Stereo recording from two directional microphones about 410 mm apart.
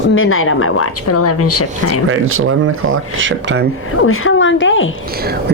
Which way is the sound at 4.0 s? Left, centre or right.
Left.